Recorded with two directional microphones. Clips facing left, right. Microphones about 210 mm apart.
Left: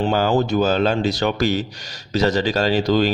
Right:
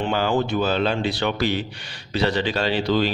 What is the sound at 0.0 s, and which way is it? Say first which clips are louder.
Speech: left 3 dB; 40° left (ahead or behind).